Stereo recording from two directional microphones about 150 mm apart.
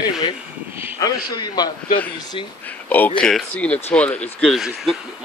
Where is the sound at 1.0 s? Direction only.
30° left (ahead or behind).